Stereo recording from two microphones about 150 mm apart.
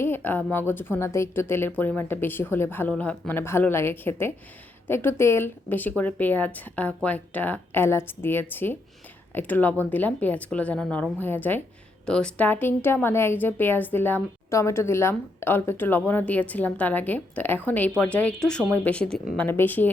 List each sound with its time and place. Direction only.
0.0 s a woman's voice: 15° left (ahead or behind)